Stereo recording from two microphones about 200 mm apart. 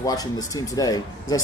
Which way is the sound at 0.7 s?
20° left (ahead or behind).